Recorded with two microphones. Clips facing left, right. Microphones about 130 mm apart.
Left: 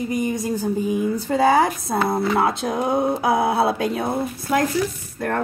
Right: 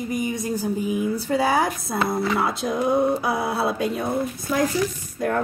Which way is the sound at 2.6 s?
55° left (ahead or behind).